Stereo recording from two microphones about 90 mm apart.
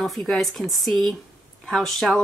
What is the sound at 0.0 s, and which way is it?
Speech, centre (ahead or behind).